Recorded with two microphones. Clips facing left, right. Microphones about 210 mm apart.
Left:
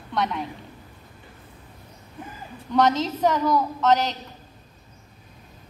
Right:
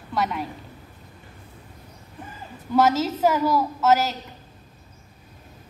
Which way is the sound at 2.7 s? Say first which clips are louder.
Right 1 dB; 5° right (ahead or behind).